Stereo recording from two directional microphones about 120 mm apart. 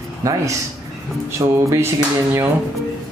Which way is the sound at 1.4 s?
30° right (ahead or behind).